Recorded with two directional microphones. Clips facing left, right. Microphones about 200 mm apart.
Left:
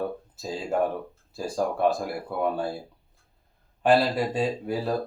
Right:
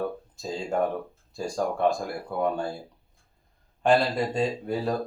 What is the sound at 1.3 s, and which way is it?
Speech, 5° left (ahead or behind).